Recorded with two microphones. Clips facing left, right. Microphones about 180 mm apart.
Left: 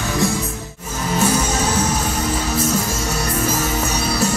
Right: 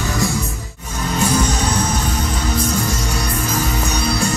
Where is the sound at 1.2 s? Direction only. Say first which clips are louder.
Even; 5° left (ahead or behind).